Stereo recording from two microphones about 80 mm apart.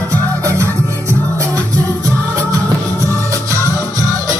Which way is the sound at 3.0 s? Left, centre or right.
Right.